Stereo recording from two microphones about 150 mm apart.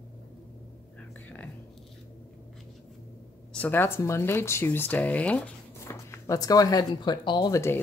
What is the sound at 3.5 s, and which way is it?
Speech, 10° left (ahead or behind).